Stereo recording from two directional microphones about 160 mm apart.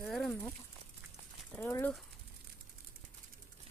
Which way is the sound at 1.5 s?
15° left (ahead or behind).